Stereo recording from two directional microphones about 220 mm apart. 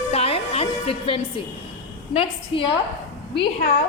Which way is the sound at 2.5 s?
25° left (ahead or behind).